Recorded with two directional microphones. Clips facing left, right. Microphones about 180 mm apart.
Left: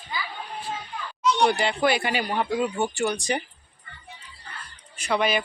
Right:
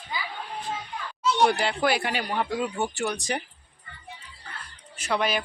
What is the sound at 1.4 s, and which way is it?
Speech, 5° right (ahead or behind).